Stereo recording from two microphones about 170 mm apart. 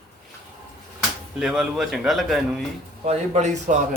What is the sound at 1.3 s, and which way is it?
Speech, 5° right (ahead or behind).